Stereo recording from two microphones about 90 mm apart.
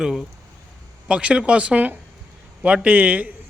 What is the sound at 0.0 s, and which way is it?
A man's voice, 5° right (ahead or behind).